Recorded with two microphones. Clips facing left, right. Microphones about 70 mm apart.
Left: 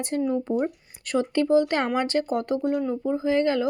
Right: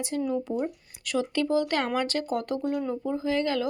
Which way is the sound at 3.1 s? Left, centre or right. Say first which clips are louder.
Left 5 dB; left.